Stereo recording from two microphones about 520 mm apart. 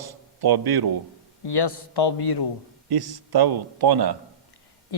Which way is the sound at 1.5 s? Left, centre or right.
Left.